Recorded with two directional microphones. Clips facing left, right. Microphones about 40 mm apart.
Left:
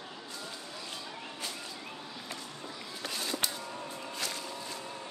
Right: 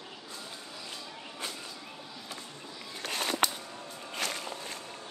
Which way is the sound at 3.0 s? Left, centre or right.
Right.